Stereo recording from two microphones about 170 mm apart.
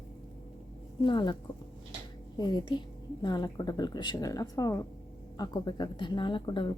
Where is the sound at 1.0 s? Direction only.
25° left (ahead or behind).